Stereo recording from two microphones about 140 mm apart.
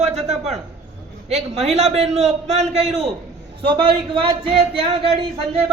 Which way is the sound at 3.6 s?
40° right (ahead or behind).